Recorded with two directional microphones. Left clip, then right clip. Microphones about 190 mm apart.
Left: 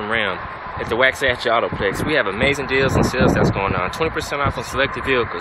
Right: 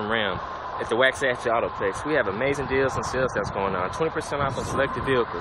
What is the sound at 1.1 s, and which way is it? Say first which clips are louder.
Speech: left 5 dB; 15° left (ahead or behind).